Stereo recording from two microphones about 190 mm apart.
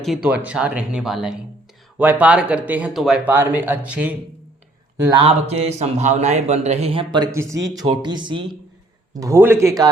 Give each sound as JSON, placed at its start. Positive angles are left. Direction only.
{"t": 0.0, "sound": "speech", "side_deg": -5}
{"t": 5.0, "sound": "speech", "side_deg": -25}
{"t": 9.2, "sound": "speech", "side_deg": -15}